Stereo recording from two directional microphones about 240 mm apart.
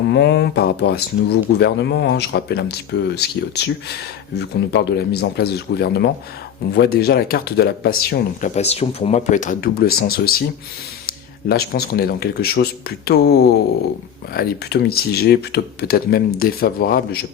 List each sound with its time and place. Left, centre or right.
0.1 s speech: left
11.4 s speech: left